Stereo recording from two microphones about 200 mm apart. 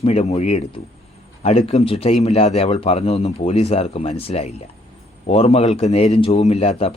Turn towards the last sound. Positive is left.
turn(degrees=30)  # may be behind; listen again after turning